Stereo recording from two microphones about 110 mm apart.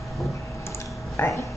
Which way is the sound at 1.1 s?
25° left (ahead or behind).